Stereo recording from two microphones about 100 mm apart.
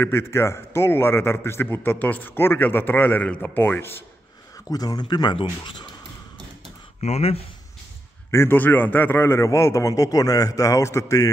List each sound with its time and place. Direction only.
0.0 s a man's voice: 25° left (ahead or behind)
4.6 s speech: 40° left (ahead or behind); by 5.9 s 55° left (ahead or behind)
7.1 s speech: 90° left
8.3 s a man's voice: 25° left (ahead or behind)